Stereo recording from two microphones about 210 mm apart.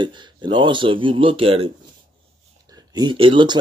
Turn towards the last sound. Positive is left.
turn(degrees=-25)  # may be behind; listen again after turning